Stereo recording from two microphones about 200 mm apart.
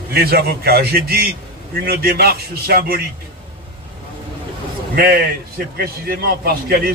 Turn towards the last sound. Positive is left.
turn(degrees=-50)  # may be behind; listen again after turning